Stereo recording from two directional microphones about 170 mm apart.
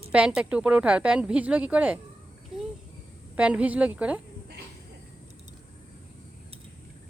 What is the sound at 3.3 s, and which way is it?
Speech, 5° right (ahead or behind).